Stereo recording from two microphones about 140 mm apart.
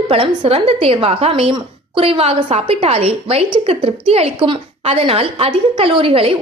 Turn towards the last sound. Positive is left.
turn(degrees=-40)  # may be behind; listen again after turning